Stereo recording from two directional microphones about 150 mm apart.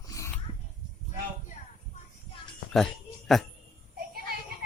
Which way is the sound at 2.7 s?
Centre (ahead or behind).